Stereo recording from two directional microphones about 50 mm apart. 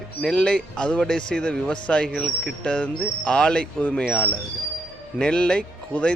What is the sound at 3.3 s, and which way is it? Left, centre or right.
Speech, centre.